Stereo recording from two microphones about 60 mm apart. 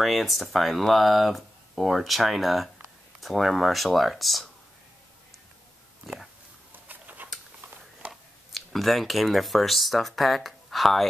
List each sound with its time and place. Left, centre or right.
0.0 s speech: centre
6.7 s a sound: right
8.1 s speech: centre